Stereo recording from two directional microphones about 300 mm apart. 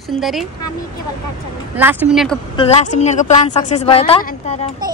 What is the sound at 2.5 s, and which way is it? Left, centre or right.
A woman's voice, centre.